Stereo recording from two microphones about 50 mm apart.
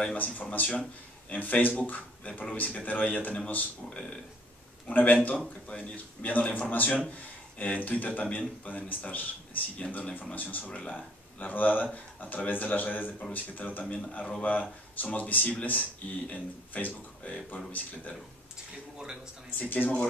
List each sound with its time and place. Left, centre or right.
0.0 s speech: left
3.9 s speech: centre
4.8 s speech: left
5.4 s speech: left
19.6 s speech: left